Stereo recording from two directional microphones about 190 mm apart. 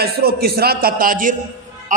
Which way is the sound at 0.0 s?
55° right (ahead or behind).